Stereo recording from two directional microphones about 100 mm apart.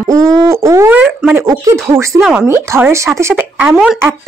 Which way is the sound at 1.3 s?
30° right (ahead or behind).